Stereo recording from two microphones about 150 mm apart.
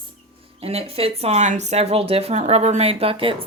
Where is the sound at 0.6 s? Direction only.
40° right (ahead or behind).